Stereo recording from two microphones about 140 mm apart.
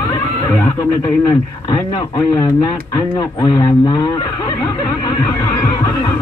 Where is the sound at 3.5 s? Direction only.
25° left (ahead or behind).